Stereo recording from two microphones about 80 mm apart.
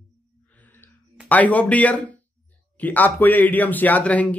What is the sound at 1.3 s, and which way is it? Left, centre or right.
Speech, centre.